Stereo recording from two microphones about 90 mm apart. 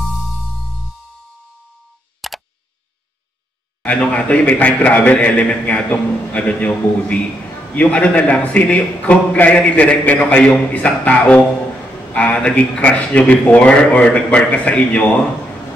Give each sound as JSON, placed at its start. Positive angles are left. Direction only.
{"t": 0.0, "sound": "music", "side_deg": 0}
{"t": 2.2, "sound": "tick", "side_deg": 0}
{"t": 3.8, "sound": "a man's voice", "side_deg": 15}